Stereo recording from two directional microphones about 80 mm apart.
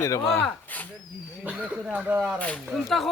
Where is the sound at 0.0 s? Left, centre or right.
Left.